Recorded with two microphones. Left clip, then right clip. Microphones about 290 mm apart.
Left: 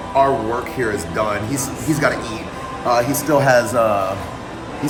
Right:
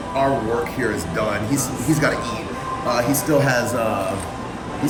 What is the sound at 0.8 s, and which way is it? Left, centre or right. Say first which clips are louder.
Speech: left 2 dB; centre.